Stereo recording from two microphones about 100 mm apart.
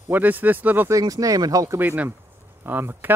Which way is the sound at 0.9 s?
35° right (ahead or behind).